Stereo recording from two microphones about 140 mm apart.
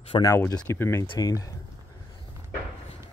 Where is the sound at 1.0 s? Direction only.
25° left (ahead or behind).